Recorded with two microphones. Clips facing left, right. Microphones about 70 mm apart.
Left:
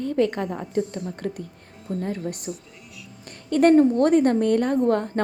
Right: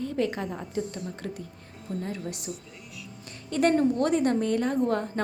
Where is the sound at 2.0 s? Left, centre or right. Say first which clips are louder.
Left 6 dB; left.